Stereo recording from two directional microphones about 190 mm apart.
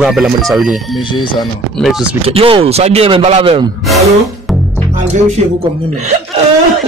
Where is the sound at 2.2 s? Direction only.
30° right (ahead or behind).